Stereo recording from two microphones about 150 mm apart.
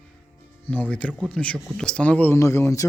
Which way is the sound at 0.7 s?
10° left (ahead or behind).